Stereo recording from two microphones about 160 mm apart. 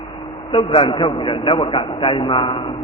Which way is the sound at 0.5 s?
35° left (ahead or behind).